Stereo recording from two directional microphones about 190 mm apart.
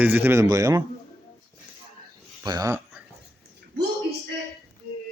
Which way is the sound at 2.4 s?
20° right (ahead or behind).